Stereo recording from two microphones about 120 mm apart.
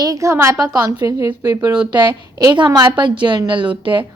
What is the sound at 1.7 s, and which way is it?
Speech, 5° right (ahead or behind).